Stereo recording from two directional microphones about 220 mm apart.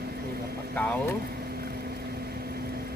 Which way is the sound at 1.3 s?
45° right (ahead or behind).